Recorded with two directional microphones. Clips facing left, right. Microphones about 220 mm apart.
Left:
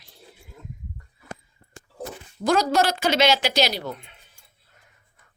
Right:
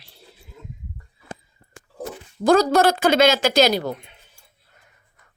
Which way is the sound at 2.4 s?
55° right (ahead or behind).